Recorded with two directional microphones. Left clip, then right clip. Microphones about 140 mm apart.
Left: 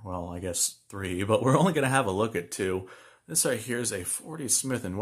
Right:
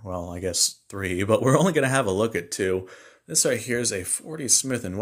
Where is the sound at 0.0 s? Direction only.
15° right (ahead or behind).